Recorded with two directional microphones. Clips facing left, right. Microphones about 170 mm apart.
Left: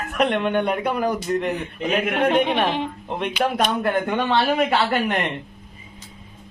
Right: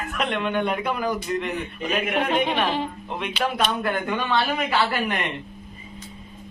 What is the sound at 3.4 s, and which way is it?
Speech, 35° left (ahead or behind).